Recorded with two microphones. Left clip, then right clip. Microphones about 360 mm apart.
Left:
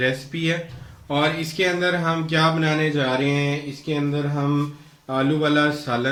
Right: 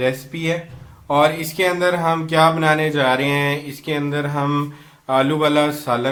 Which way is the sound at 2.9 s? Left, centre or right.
Centre.